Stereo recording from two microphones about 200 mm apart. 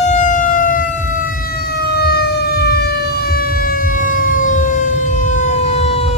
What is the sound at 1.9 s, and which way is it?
Emergency vehicle, 55° left (ahead or behind).